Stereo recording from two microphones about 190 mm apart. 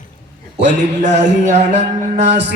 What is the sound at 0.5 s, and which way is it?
Music, 35° right (ahead or behind).